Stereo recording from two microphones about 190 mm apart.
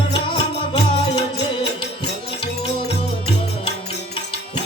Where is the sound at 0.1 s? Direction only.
25° left (ahead or behind).